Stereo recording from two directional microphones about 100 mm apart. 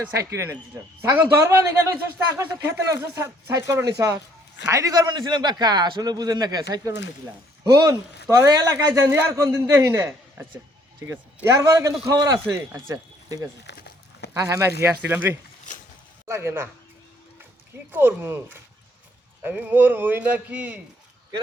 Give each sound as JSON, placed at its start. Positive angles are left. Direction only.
{"t": 0.2, "sound": "a man's voice", "side_deg": -30}
{"t": 11.4, "sound": "a man's voice", "side_deg": -35}
{"t": 15.0, "sound": "a man's voice", "side_deg": -20}
{"t": 17.9, "sound": "a man's voice", "side_deg": -25}